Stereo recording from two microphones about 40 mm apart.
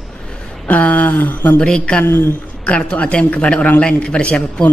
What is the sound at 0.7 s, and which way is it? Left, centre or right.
Speech, left.